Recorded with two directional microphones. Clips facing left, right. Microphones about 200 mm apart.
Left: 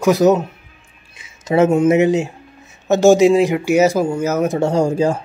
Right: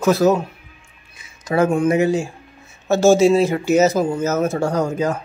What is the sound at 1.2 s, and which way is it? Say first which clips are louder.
Speech: left 4 dB; 25° left (ahead or behind).